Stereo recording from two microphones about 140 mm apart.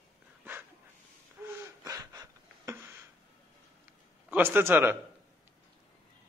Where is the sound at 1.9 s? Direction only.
25° right (ahead or behind).